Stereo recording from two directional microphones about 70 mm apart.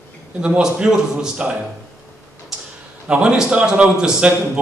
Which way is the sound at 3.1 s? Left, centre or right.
Centre.